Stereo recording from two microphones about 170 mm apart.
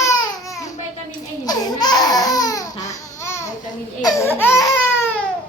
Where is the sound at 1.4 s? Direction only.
25° left (ahead or behind).